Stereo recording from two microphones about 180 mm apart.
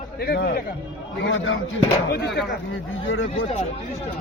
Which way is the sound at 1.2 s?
90° left.